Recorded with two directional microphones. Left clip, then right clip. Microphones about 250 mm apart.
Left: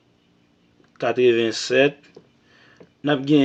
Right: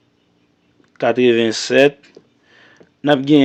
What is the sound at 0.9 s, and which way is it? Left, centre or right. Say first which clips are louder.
Speech: right 4 dB; right.